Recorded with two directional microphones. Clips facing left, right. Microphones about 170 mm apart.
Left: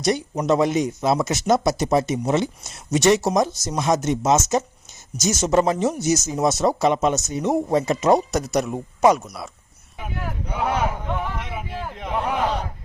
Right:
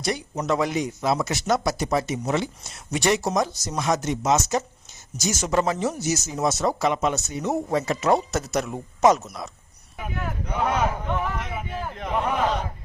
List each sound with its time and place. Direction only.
0.0 s speech: 20° left (ahead or behind); by 12.5 s 5° left (ahead or behind)